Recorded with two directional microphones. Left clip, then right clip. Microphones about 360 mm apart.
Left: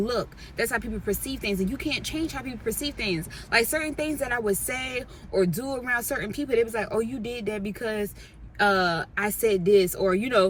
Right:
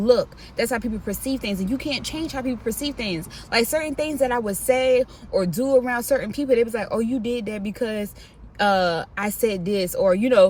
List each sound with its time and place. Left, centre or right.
0.0 s speech: centre